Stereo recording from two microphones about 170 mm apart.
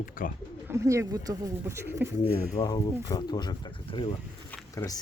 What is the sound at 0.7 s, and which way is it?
Speech, 15° right (ahead or behind).